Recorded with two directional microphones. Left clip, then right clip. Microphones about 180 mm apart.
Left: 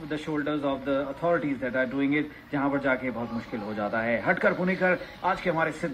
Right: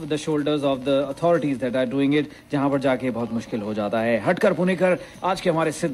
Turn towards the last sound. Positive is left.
turn(degrees=-45)  # may be behind; listen again after turning